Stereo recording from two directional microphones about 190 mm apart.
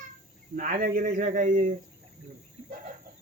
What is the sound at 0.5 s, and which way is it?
Speech, 45° right (ahead or behind).